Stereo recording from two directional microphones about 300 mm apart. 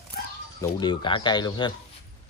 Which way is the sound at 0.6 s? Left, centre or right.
Centre.